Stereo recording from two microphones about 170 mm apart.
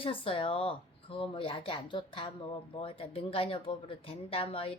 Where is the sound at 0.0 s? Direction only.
30° left (ahead or behind).